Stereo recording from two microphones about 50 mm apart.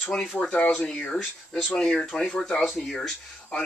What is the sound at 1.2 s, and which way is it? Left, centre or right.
Speech, centre.